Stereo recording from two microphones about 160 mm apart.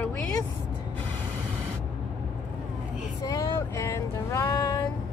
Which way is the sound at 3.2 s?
20° left (ahead or behind).